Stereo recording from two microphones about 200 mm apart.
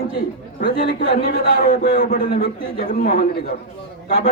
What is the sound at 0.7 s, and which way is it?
A man's voice, 50° left (ahead or behind).